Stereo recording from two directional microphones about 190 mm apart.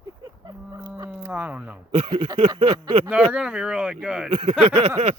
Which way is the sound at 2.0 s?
25° right (ahead or behind).